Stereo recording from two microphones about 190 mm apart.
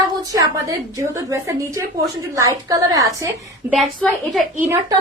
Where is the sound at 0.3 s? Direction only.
20° right (ahead or behind).